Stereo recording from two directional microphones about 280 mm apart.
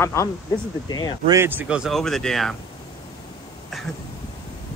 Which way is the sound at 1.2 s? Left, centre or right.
Centre.